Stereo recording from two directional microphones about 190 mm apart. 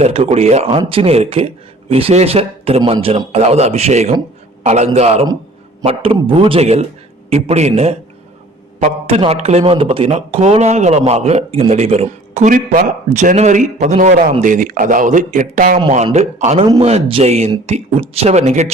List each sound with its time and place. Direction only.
0.0 s a man's voice: 35° right (ahead or behind)